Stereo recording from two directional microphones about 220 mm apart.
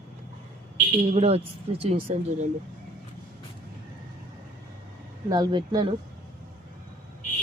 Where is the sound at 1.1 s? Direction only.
30° right (ahead or behind).